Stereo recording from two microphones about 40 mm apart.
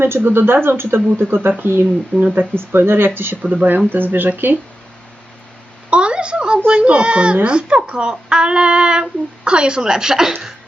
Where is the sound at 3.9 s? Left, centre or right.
Right.